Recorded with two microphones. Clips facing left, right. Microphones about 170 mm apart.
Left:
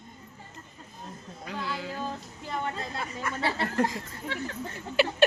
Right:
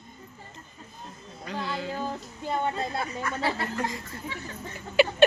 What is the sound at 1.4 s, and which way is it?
Music, 5° left (ahead or behind).